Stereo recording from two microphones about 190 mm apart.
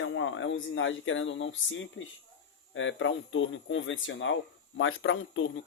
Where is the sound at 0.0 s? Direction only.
90° left.